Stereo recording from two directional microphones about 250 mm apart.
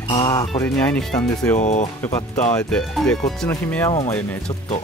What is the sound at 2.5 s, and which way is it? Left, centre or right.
Speech, centre.